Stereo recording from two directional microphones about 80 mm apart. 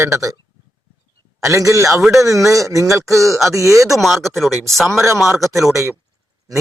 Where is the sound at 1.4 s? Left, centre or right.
Right.